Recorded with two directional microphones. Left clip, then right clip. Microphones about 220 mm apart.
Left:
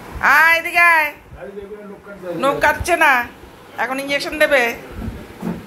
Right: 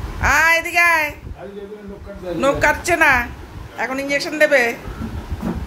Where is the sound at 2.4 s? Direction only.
20° right (ahead or behind).